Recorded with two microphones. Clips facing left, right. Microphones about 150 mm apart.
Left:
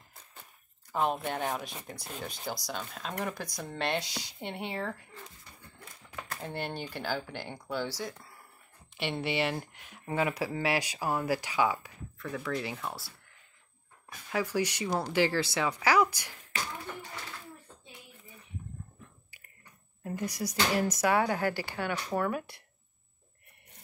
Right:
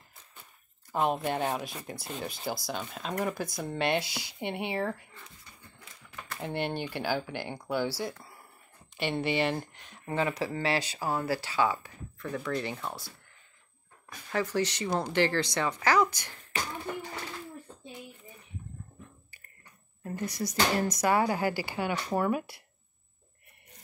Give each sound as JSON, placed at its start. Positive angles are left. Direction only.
{"t": 0.9, "sound": "speech", "side_deg": -5}
{"t": 6.5, "sound": "speech", "side_deg": -55}
{"t": 6.9, "sound": "speech", "side_deg": -10}
{"t": 8.9, "sound": "speech", "side_deg": 0}
{"t": 12.2, "sound": "speech", "side_deg": 0}
{"t": 14.3, "sound": "speech", "side_deg": 10}
{"t": 20.0, "sound": "speech", "side_deg": 10}